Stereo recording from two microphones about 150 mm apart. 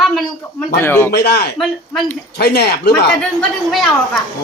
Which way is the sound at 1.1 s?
90° left.